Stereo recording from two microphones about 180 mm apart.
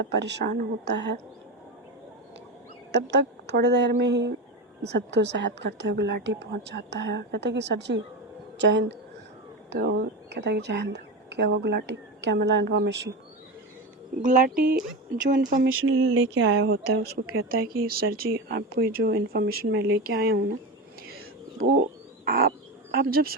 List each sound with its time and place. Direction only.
0.0 s speech: 75° right (ahead or behind)
2.9 s speech: 75° right (ahead or behind)
9.6 s speech: 70° right (ahead or behind)
14.2 s speech: 45° right (ahead or behind)
15.2 s speech: 45° right (ahead or behind)
15.6 s speech: 90° right; by 20.4 s 60° right (ahead or behind)
21.1 s a sound: 55° right (ahead or behind)
22.2 s bird: 60° right (ahead or behind)
23.0 s speech: 55° right (ahead or behind)